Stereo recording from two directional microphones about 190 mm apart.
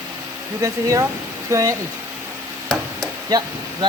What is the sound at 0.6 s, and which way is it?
Speech, 15° right (ahead or behind).